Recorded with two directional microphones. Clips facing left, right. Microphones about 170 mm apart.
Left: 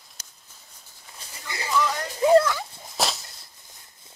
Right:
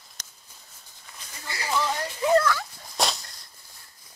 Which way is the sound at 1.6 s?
30° right (ahead or behind).